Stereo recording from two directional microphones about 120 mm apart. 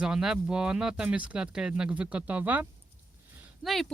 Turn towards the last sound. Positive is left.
turn(degrees=0)  # may be behind; listen again after turning